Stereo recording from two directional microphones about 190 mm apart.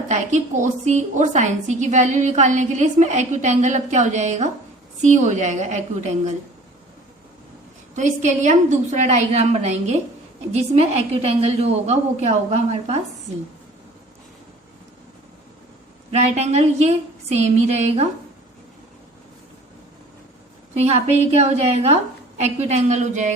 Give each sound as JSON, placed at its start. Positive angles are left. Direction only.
{"t": 0.1, "sound": "a woman's voice", "side_deg": -40}
{"t": 7.9, "sound": "a woman's voice", "side_deg": -40}
{"t": 16.1, "sound": "a woman's voice", "side_deg": -35}
{"t": 20.7, "sound": "a woman's voice", "side_deg": -35}